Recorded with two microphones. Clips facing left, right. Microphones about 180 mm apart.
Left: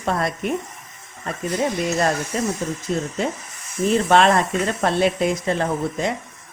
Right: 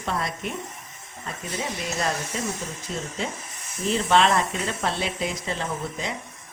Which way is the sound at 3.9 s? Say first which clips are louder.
Left 4 dB; 50° left (ahead or behind).